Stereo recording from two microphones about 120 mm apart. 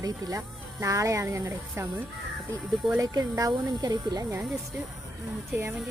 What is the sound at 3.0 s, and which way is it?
Speech, 30° right (ahead or behind).